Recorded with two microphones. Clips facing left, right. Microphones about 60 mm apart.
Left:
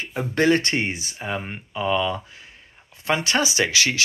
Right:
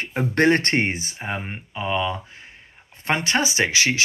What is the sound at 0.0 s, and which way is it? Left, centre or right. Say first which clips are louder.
Speech: right 2 dB; right.